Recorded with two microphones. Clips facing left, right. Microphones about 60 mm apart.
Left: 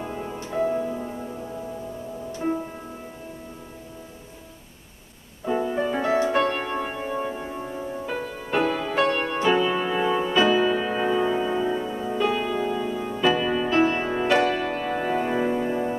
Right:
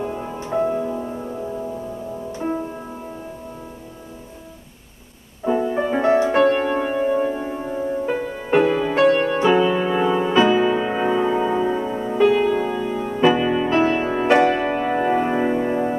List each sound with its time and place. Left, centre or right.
0.0 s music: centre
5.5 s music: centre
5.8 s music: right
6.3 s music: centre
8.5 s music: centre
12.3 s music: centre